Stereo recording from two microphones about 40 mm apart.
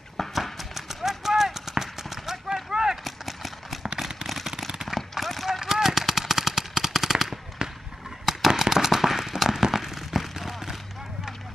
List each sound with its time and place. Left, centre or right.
0.2 s run: centre
3.0 s clip-clop: centre
4.8 s a sound: centre
5.6 s machine gun: centre
7.6 s fireworks: right
8.3 s firecracker: centre